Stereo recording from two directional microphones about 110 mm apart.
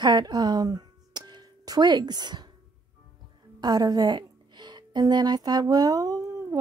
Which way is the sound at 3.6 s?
40° right (ahead or behind).